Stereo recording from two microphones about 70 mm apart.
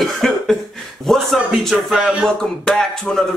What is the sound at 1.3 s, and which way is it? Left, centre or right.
Speech, centre.